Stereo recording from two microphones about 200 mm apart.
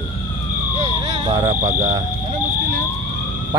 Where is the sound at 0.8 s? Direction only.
25° right (ahead or behind).